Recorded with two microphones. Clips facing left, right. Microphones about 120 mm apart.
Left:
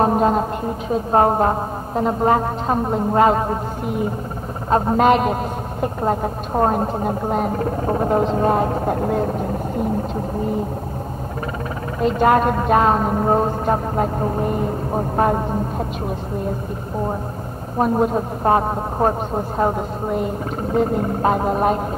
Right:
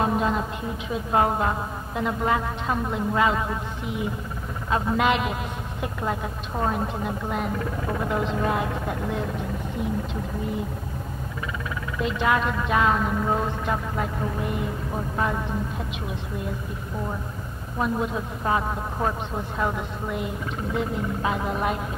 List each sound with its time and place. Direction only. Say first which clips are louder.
0.0 s a man's voice: left 7 dB; 45° left (ahead or behind)
12.0 s a man's voice: left 8 dB; 45° left (ahead or behind)
17.7 s a man's voice: left 8 dB; 45° left (ahead or behind)